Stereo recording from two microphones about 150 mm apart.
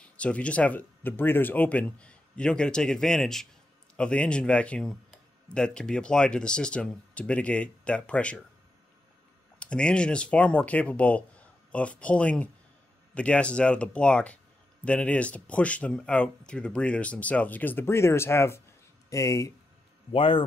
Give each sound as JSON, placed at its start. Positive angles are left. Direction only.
{"t": 0.0, "sound": "speech", "side_deg": 10}
{"t": 9.6, "sound": "speech", "side_deg": 5}
{"t": 20.1, "sound": "a man's voice", "side_deg": 35}